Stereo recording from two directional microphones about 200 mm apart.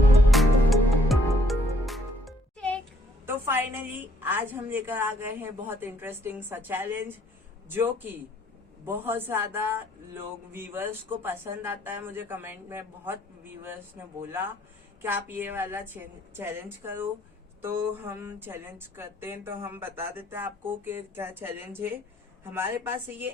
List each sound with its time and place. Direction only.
0.3 s music: centre (ahead or behind)
3.2 s a man's voice: 10° right (ahead or behind)